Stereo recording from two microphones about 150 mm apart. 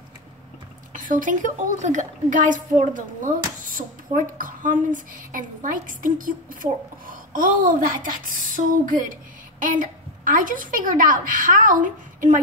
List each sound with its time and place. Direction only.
0.9 s a child's voice: 60° right (ahead or behind)